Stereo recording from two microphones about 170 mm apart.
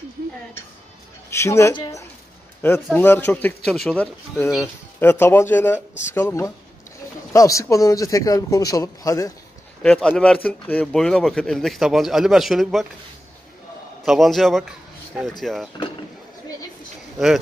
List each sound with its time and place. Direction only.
1.3 s a man's voice: 15° left (ahead or behind)
9.8 s a man's voice: 5° left (ahead or behind)
14.0 s a man's voice: centre (ahead or behind)